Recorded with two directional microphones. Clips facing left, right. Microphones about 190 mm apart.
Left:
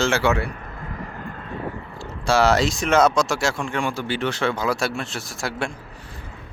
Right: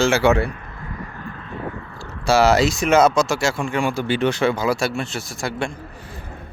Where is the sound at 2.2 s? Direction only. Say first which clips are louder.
Right 3 dB; 5° right (ahead or behind).